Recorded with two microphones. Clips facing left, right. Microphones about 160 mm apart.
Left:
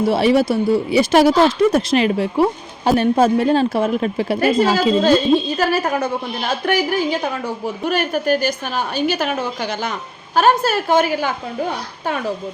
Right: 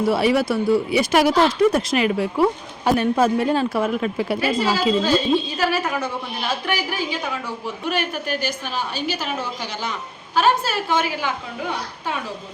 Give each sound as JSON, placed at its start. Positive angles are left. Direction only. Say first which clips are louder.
{"t": 0.1, "sound": "speech", "louder": "left 4 dB", "side_deg": 25}
{"t": 4.4, "sound": "a woman's voice", "louder": "left 8 dB", "side_deg": 50}